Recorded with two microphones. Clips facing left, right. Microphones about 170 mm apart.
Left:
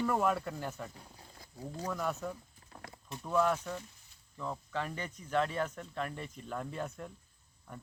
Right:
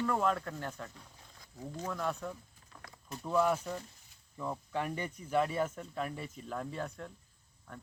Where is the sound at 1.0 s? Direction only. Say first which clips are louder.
Left 3 dB; 35° left (ahead or behind).